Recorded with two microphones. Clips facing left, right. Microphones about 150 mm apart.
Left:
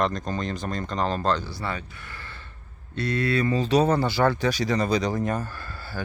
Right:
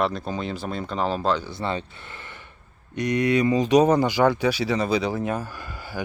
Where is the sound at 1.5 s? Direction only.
25° right (ahead or behind).